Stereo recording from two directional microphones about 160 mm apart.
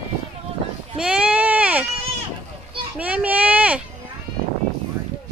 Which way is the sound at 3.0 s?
10° right (ahead or behind).